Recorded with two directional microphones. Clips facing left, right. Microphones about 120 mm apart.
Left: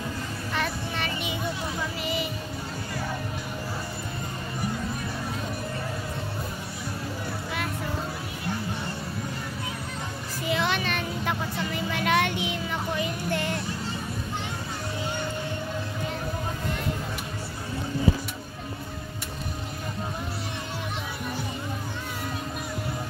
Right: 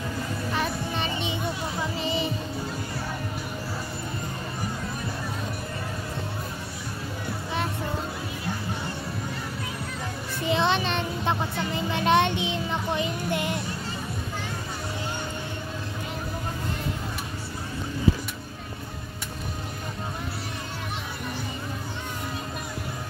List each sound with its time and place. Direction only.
0.5 s music: 15° right (ahead or behind)
1.8 s children playing: 25° right (ahead or behind)
10.5 s a sound: 25° right (ahead or behind)